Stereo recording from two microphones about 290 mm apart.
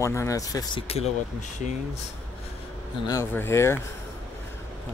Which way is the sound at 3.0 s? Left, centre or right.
Centre.